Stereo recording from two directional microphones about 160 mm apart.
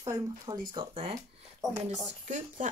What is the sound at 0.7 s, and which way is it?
Speech, 35° right (ahead or behind).